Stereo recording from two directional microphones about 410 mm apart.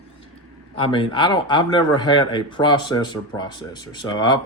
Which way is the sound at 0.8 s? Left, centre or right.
Centre.